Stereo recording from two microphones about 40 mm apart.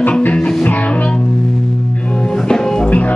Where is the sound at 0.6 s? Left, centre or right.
Left.